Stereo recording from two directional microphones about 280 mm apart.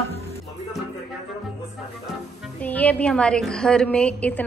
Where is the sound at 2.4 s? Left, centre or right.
Centre.